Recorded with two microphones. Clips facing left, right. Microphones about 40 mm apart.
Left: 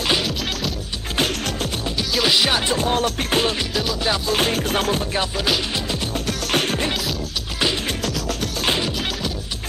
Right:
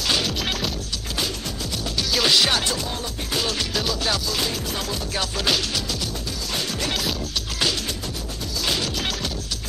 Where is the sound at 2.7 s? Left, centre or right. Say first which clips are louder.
Left 9 dB; left.